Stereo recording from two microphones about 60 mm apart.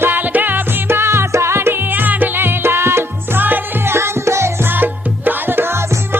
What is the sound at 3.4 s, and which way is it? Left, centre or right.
Music, right.